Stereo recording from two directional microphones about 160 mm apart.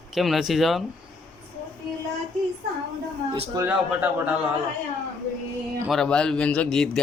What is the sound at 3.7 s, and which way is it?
Speech, 10° right (ahead or behind).